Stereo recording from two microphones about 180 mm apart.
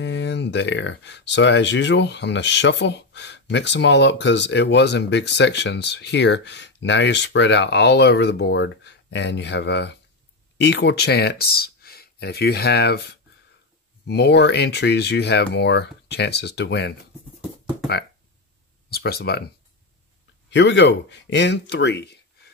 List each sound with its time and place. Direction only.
0.0 s speech: 75° left (ahead or behind)
18.9 s speech: 60° left (ahead or behind)
20.4 s speech: 80° left